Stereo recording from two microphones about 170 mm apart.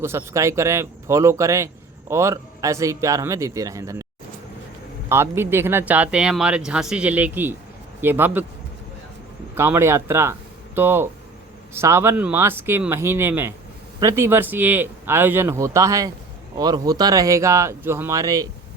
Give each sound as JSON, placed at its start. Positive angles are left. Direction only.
{"t": 0.0, "sound": "speech", "side_deg": -15}
{"t": 5.0, "sound": "speech", "side_deg": -15}
{"t": 9.6, "sound": "speech", "side_deg": -15}